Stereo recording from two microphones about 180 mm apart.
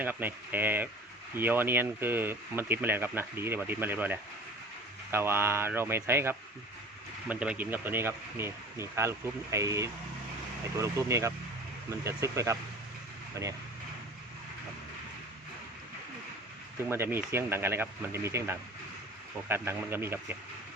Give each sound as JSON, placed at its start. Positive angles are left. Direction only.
{"t": 0.0, "sound": "speech", "side_deg": -10}
{"t": 16.9, "sound": "speech", "side_deg": -15}